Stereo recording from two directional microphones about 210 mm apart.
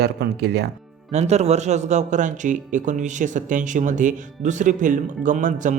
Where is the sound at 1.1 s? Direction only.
30° right (ahead or behind).